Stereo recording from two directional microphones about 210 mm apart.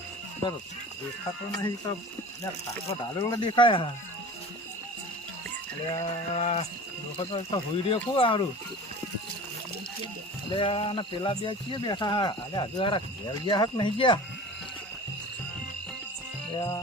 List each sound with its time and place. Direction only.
2.9 s speech: 20° left (ahead or behind)
5.9 s speech: 25° left (ahead or behind)
10.5 s speech: 25° left (ahead or behind)
16.6 s music: 15° left (ahead or behind)